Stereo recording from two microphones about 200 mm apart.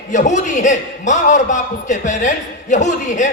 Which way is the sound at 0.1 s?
40° left (ahead or behind).